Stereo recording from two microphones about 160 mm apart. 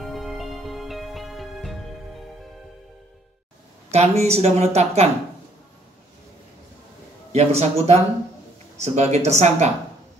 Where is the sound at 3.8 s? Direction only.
40° right (ahead or behind).